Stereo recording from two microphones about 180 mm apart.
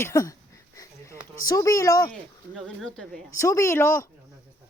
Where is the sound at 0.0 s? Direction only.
15° left (ahead or behind).